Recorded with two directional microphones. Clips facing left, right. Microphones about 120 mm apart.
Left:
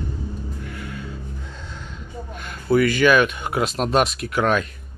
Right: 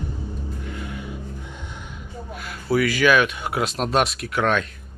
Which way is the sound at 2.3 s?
5° right (ahead or behind).